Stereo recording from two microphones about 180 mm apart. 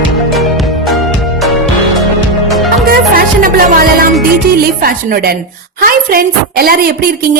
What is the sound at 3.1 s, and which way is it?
Music, 55° right (ahead or behind).